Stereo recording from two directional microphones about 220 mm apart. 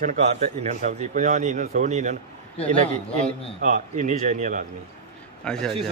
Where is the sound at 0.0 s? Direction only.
35° right (ahead or behind).